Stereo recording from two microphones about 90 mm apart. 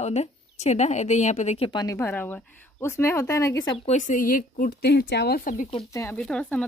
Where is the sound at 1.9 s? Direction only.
20° left (ahead or behind).